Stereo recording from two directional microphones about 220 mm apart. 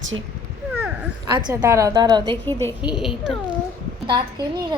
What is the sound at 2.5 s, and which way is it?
Speech, 10° left (ahead or behind).